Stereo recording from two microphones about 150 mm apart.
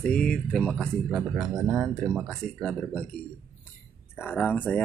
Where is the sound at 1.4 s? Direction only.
25° right (ahead or behind).